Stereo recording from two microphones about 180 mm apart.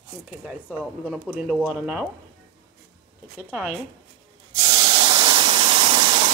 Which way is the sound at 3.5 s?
5° right (ahead or behind).